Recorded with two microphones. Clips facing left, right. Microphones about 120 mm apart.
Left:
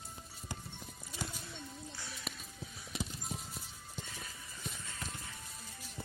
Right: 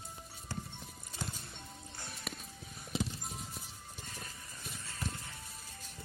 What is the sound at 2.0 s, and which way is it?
Music, 50° right (ahead or behind).